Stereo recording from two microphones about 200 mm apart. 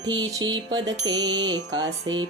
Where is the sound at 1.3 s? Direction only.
65° right (ahead or behind).